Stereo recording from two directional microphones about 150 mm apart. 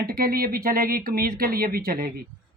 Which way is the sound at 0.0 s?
80° right.